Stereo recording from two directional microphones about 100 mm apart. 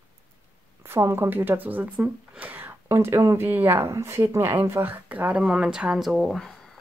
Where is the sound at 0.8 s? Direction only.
25° right (ahead or behind).